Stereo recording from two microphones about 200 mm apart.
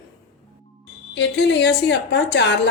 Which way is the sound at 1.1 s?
60° left (ahead or behind).